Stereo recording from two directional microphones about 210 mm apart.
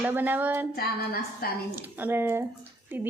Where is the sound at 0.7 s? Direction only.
45° left (ahead or behind).